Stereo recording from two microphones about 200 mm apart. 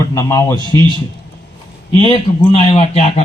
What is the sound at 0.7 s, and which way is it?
Speech, 20° right (ahead or behind).